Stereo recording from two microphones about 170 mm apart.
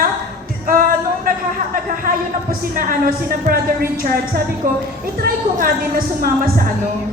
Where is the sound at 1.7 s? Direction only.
55° right (ahead or behind).